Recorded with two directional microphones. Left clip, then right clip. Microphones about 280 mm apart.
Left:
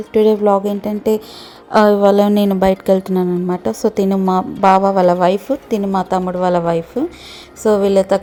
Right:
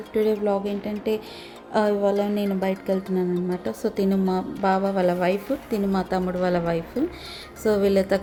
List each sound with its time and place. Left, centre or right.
0.1 s a woman's voice: left